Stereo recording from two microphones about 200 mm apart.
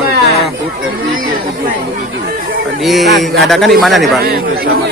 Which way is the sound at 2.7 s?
Centre (ahead or behind).